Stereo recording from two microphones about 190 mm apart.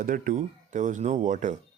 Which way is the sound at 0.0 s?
45° right (ahead or behind).